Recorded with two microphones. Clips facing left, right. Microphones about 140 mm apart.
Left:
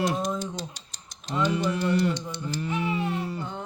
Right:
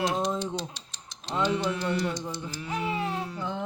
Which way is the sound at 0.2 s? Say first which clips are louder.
Right 1 dB; 45° left (ahead or behind).